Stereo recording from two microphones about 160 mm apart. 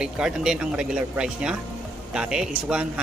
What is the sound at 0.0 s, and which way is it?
Speech, 5° right (ahead or behind).